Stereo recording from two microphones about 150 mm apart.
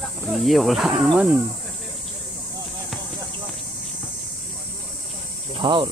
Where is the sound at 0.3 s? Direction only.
Centre (ahead or behind).